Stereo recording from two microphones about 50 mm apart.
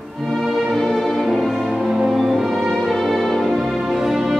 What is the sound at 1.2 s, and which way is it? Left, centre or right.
Music, centre.